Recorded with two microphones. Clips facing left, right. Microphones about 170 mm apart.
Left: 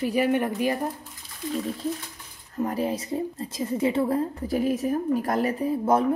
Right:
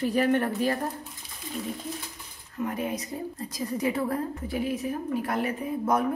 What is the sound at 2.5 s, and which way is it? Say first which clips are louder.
A woman's voice: left 4 dB; 35° left (ahead or behind).